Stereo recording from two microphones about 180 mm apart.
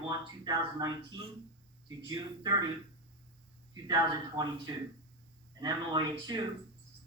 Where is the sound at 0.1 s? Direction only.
20° right (ahead or behind).